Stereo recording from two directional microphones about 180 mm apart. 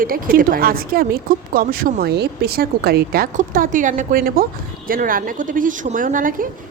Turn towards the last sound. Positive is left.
turn(degrees=-50)  # may be behind; listen again after turning